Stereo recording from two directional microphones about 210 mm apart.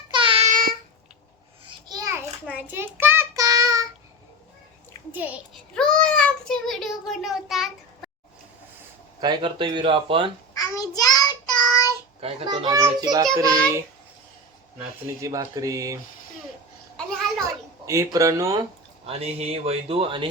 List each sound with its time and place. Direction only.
0.1 s child singing: 25° right (ahead or behind); by 0.8 s 40° right (ahead or behind)
1.6 s child singing: 20° right (ahead or behind)
5.1 s speech: 10° right (ahead or behind)
5.7 s child singing: 5° left (ahead or behind)
7.1 s a child's voice: centre (ahead or behind)
9.2 s speech: 20° right (ahead or behind)
10.5 s child singing: 15° left (ahead or behind)
12.2 s speech: 25° right (ahead or behind)
15.0 s speech: 15° right (ahead or behind)
17.8 s speech: 15° right (ahead or behind)
19.0 s speech: 30° right (ahead or behind)